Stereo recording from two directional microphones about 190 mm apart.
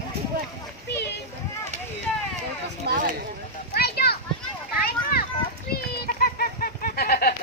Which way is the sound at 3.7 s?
55° left (ahead or behind).